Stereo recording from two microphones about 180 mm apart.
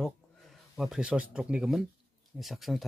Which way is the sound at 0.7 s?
5° right (ahead or behind).